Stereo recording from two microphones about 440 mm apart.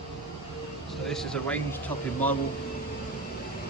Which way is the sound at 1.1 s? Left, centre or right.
Centre.